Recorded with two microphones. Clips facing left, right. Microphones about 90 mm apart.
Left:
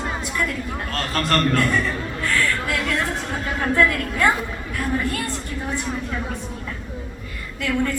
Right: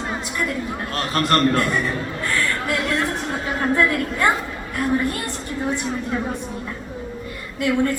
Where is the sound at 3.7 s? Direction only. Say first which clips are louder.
Left 2 dB; 25° right (ahead or behind).